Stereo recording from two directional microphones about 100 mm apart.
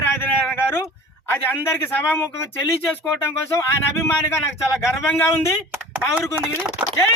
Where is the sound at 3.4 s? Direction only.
25° left (ahead or behind).